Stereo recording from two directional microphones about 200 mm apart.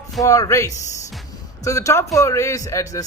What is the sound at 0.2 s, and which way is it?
Speech, 15° left (ahead or behind).